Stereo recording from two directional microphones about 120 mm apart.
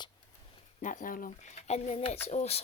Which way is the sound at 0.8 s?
90° left.